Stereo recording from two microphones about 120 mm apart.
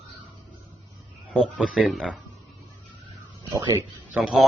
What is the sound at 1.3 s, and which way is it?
Speech, 5° right (ahead or behind).